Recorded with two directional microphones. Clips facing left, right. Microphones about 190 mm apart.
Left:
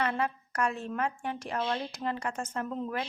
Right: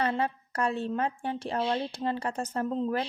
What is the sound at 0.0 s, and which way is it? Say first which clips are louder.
A woman's voice: right 2 dB; 30° right (ahead or behind).